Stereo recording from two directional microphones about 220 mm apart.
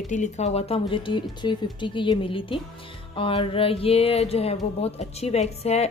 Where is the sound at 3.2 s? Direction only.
25° left (ahead or behind).